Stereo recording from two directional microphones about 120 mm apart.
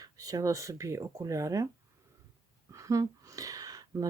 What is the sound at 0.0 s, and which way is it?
Speech, 30° right (ahead or behind).